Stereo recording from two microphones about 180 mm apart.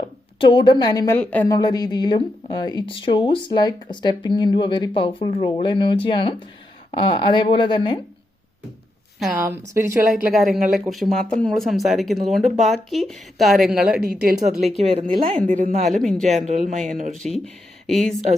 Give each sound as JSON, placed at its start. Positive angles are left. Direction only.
{"t": 0.3, "sound": "speech", "side_deg": 25}
{"t": 1.2, "sound": "speech", "side_deg": 10}
{"t": 1.5, "sound": "speech", "side_deg": 20}
{"t": 9.1, "sound": "a woman's voice", "side_deg": 0}
{"t": 9.4, "sound": "speech", "side_deg": -15}
{"t": 10.2, "sound": "speech", "side_deg": 0}
{"t": 14.0, "sound": "speech", "side_deg": -50}
{"t": 14.8, "sound": "a woman's voice", "side_deg": -35}
{"t": 17.2, "sound": "speech", "side_deg": 0}